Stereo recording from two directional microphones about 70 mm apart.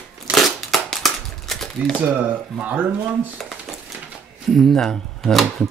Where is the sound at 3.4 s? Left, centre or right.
Centre.